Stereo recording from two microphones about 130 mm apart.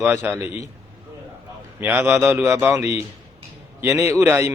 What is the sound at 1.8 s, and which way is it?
A man's voice, 15° right (ahead or behind).